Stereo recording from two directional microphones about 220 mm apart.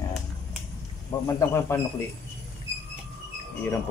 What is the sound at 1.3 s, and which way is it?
Speech, 10° left (ahead or behind).